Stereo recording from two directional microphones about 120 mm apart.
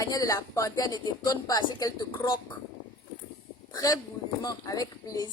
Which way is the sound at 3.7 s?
30° left (ahead or behind).